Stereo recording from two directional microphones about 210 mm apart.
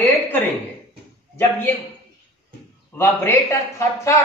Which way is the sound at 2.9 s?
10° left (ahead or behind).